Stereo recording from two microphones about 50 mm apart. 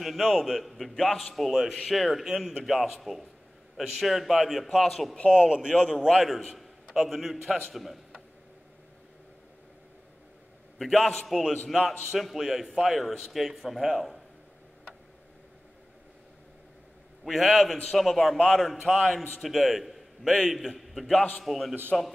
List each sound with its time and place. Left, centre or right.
0.0 s a man's voice: centre
5.1 s a man's voice: left
6.9 s a man's voice: centre
10.8 s a man's voice: centre
17.2 s a man's voice: centre